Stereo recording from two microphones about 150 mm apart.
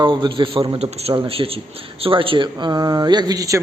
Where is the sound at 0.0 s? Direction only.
30° right (ahead or behind).